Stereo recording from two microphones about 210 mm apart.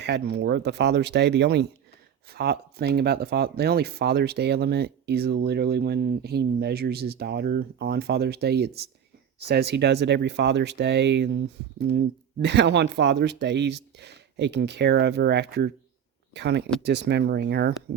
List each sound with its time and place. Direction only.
0.0 s speech: 55° right (ahead or behind)